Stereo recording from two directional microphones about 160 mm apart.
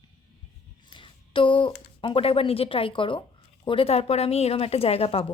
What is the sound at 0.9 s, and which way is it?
A woman's voice, 30° left (ahead or behind).